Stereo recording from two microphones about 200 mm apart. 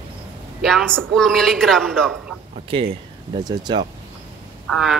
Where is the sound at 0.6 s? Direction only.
Centre (ahead or behind).